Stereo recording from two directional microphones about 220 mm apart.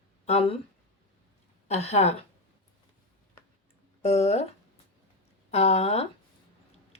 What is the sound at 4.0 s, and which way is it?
Speech, 30° left (ahead or behind).